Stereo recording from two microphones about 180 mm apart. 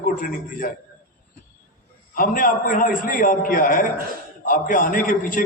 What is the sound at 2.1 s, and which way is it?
A man's voice, 50° left (ahead or behind).